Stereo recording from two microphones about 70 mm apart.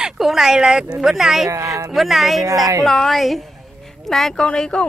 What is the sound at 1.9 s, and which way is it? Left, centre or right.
Speech, centre.